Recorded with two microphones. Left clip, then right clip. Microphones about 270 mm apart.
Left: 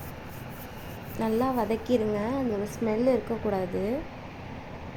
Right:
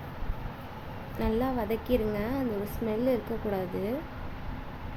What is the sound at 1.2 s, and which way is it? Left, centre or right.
Speech, centre.